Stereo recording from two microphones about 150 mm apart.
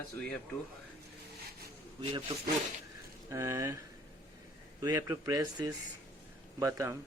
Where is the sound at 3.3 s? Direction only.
20° right (ahead or behind).